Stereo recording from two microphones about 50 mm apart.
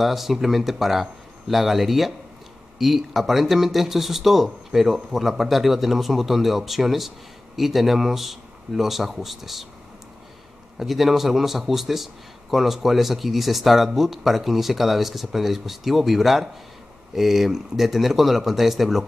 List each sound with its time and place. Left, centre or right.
0.0 s speech: centre
10.8 s speech: centre